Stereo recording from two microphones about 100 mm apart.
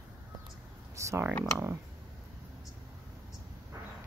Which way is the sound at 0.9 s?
30° right (ahead or behind).